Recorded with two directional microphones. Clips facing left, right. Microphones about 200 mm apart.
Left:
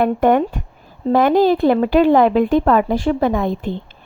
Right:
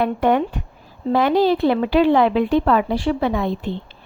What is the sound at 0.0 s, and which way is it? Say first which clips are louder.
A woman's voice: left 3 dB; 50° left (ahead or behind).